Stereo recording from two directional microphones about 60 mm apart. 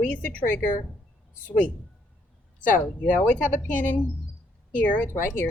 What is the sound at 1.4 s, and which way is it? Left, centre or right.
Speech, left.